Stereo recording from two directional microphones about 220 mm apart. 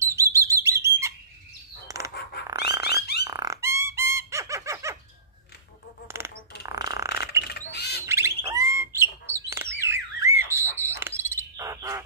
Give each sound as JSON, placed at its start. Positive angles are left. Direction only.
{"t": 0.0, "sound": "bird", "side_deg": -15}
{"t": 2.4, "sound": "dog", "side_deg": -15}
{"t": 3.3, "sound": "fowl", "side_deg": -15}
{"t": 6.0, "sound": "a sound", "side_deg": -10}
{"t": 7.7, "sound": "bird", "side_deg": 50}
{"t": 8.1, "sound": "bird", "side_deg": -10}
{"t": 10.8, "sound": "cricket", "side_deg": -10}